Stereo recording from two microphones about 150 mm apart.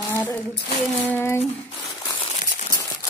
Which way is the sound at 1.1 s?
15° left (ahead or behind).